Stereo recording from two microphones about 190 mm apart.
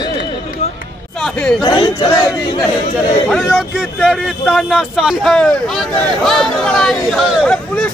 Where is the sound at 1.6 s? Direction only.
20° left (ahead or behind).